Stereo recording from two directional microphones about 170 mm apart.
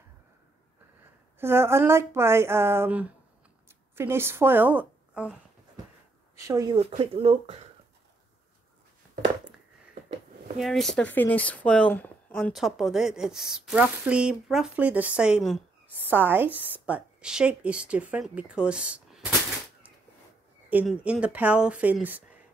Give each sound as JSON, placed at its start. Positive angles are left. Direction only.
{"t": 1.4, "sound": "a woman's voice", "side_deg": -15}
{"t": 6.3, "sound": "speech", "side_deg": -20}
{"t": 7.0, "sound": "speech", "side_deg": -30}
{"t": 10.6, "sound": "a woman's voice", "side_deg": 0}
{"t": 20.7, "sound": "a woman's voice", "side_deg": -5}